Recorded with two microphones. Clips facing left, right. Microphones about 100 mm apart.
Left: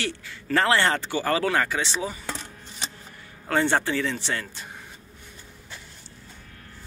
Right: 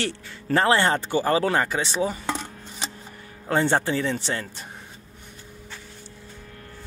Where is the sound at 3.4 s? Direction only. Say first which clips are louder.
Right 1 dB; 25° right (ahead or behind).